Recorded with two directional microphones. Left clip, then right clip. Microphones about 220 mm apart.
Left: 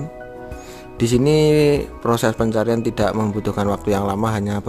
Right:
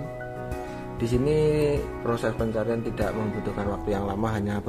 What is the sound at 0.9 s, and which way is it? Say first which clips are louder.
Speech: left 8 dB; 45° left (ahead or behind).